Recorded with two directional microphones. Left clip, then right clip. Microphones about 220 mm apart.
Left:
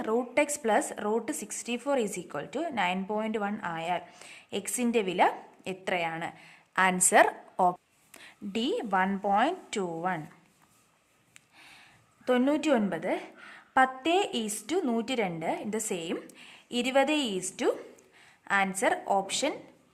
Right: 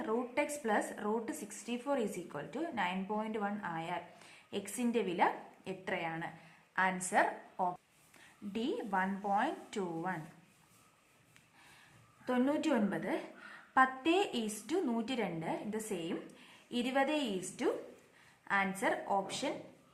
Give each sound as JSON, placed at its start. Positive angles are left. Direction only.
{"t": 0.0, "sound": "speech", "side_deg": 45}
{"t": 12.2, "sound": "a woman's voice", "side_deg": 40}